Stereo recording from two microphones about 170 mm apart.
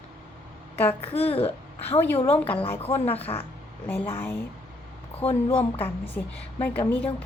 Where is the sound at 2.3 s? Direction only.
10° left (ahead or behind).